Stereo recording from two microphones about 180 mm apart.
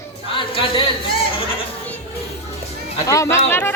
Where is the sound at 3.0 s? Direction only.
15° left (ahead or behind).